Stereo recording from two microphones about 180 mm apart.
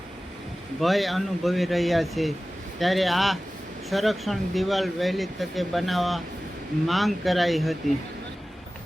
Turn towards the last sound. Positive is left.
turn(degrees=0)  # may be behind; listen again after turning